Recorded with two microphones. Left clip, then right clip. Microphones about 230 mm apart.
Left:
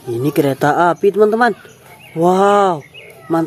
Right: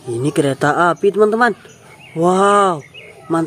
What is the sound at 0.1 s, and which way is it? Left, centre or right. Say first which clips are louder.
Speech: left 1 dB; centre.